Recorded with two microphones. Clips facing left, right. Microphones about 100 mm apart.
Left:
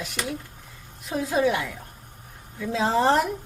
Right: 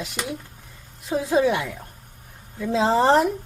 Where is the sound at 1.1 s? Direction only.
25° right (ahead or behind).